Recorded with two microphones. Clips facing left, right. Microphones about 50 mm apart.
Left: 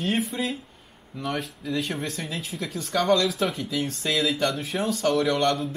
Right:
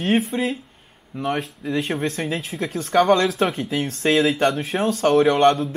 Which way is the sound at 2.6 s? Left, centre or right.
Right.